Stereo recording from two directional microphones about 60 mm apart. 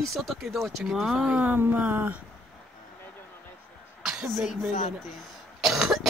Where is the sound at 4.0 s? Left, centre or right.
Centre.